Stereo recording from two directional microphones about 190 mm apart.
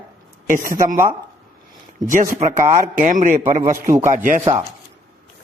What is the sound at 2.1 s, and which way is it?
A man's voice, 45° right (ahead or behind).